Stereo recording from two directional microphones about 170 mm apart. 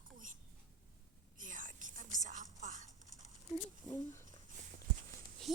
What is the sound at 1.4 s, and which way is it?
Whispering, 50° right (ahead or behind).